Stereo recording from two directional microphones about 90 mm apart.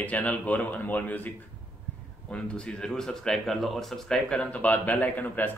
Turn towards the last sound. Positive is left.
turn(degrees=20)  # may be behind; listen again after turning